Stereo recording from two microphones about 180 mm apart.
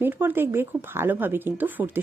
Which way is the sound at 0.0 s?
10° right (ahead or behind).